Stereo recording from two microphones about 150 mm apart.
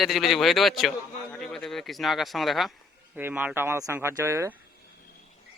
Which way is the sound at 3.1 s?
10° right (ahead or behind).